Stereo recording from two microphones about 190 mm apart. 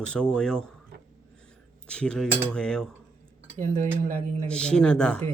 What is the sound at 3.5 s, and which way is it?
Cutlery, 40° right (ahead or behind).